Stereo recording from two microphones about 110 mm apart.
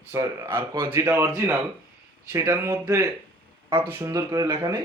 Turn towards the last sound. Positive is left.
turn(degrees=-30)  # may be behind; listen again after turning